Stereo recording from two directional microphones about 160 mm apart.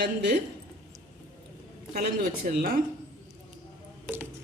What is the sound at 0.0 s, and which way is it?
Speech, 90° right.